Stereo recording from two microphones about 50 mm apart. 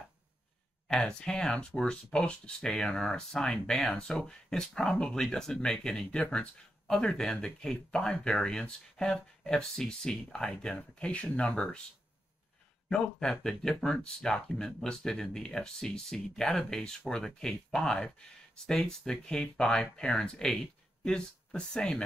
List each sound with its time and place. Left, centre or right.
0.8 s speech: centre
10.8 s speech: left
12.9 s speech: centre